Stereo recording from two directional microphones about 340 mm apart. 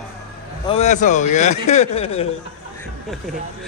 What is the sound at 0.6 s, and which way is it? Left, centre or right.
Speech, centre.